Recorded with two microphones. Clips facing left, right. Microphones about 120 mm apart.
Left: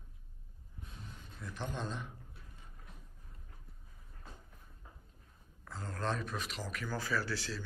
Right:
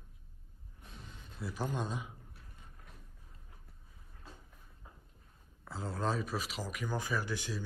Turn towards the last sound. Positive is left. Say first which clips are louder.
# even
turn(degrees=-15)  # may be behind; listen again after turning